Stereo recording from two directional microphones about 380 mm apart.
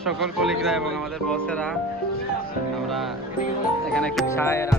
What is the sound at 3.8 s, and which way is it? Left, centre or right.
Speech, centre.